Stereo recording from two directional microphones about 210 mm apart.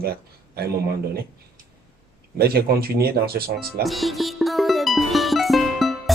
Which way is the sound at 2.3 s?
45° right (ahead or behind).